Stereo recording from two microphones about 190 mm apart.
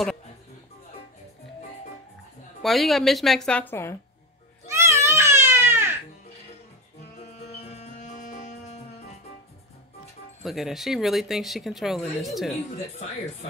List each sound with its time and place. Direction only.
2.6 s speech: centre (ahead or behind)
4.7 s baby cry: 15° right (ahead or behind)
7.4 s music: 35° left (ahead or behind)
10.4 s speech: centre (ahead or behind)